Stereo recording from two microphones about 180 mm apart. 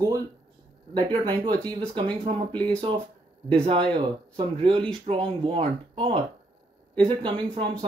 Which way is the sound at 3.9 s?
30° right (ahead or behind).